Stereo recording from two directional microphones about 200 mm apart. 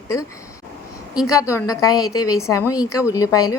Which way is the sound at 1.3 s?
15° left (ahead or behind).